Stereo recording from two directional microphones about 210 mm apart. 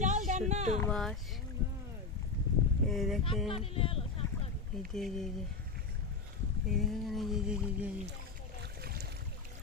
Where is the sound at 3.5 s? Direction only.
25° left (ahead or behind).